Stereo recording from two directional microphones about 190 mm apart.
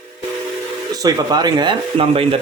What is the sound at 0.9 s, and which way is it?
Speech, 20° right (ahead or behind).